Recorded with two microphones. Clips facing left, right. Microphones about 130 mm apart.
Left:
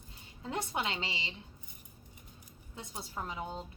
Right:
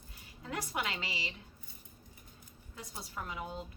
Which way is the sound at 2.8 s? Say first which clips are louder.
Left 2 dB; 20° left (ahead or behind).